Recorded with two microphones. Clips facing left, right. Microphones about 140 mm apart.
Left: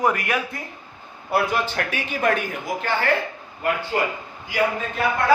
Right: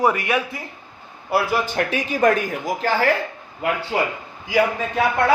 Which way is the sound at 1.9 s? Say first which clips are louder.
Right 5 dB; 40° right (ahead or behind).